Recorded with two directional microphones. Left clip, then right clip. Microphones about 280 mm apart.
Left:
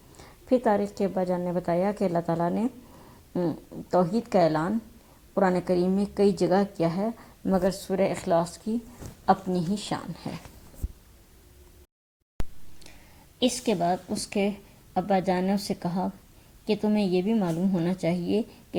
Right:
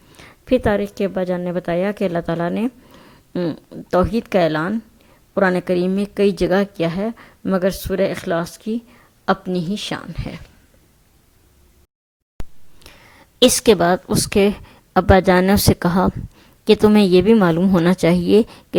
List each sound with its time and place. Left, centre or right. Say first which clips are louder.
0.2 s a woman's voice: right 7 dB; right
12.4 s a sound: right 1 dB; centre
13.4 s a woman's voice: right 12 dB; right